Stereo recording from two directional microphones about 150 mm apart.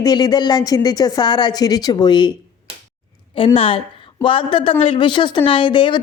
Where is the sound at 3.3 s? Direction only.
35° left (ahead or behind).